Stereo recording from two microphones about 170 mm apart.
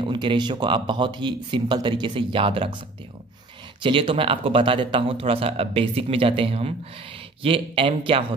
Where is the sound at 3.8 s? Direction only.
30° right (ahead or behind).